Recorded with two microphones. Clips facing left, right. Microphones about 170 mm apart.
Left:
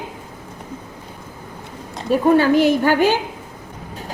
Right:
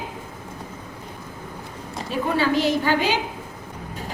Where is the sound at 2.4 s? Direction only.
50° left (ahead or behind).